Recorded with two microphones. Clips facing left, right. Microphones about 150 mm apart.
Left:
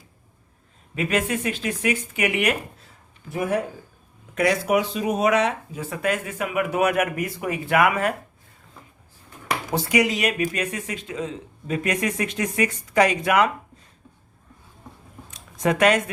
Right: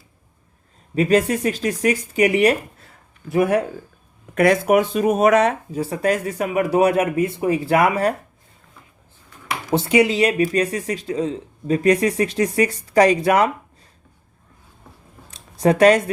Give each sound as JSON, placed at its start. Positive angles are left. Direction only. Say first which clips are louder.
{"t": 0.9, "sound": "speech", "louder": "right 7 dB", "side_deg": -35}
{"t": 3.2, "sound": "speech", "louder": "right 7 dB", "side_deg": -75}
{"t": 4.4, "sound": "speech", "louder": "right 5 dB", "side_deg": -55}
{"t": 9.7, "sound": "speech", "louder": "right 6 dB", "side_deg": -25}
{"t": 15.3, "sound": "a sound", "louder": "right 5 dB", "side_deg": -35}